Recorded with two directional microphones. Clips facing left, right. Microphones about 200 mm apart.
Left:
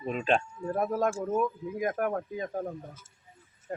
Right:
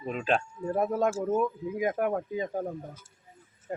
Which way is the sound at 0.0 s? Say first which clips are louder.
Left 1 dB; centre (ahead or behind).